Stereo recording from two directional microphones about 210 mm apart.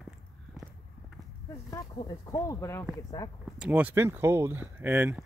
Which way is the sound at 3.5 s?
5° right (ahead or behind).